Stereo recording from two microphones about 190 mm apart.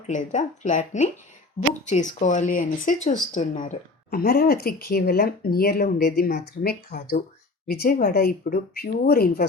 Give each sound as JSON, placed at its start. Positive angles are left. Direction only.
{"t": 0.1, "sound": "speech", "side_deg": 40}